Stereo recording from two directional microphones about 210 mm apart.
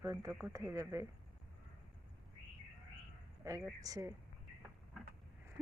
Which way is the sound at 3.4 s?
15° right (ahead or behind).